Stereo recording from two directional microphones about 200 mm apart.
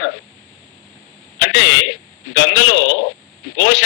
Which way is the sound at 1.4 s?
60° left (ahead or behind).